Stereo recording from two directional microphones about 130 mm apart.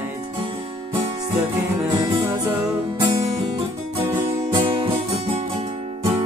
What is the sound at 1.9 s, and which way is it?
Music, 35° right (ahead or behind).